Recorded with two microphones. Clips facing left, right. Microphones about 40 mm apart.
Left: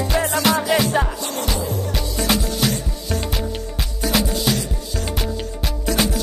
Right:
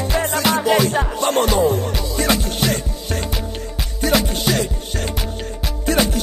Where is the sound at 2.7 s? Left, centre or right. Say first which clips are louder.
Right 2 dB; right.